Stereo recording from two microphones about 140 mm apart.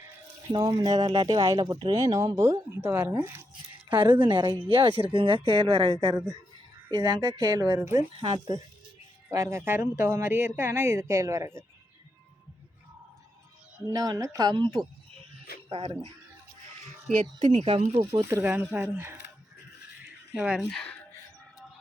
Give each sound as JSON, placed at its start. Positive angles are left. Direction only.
{"t": 0.5, "sound": "speech", "side_deg": -30}
{"t": 4.0, "sound": "speech", "side_deg": -35}
{"t": 9.3, "sound": "speech", "side_deg": -20}
{"t": 13.8, "sound": "speech", "side_deg": -25}
{"t": 16.8, "sound": "a sound", "side_deg": -60}
{"t": 17.5, "sound": "speech", "side_deg": -45}
{"t": 18.3, "sound": "speech", "side_deg": -15}
{"t": 20.3, "sound": "speech", "side_deg": -10}
{"t": 20.7, "sound": "speech", "side_deg": 5}